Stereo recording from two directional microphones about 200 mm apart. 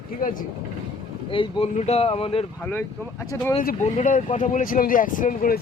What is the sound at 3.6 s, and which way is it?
Speech, 40° left (ahead or behind).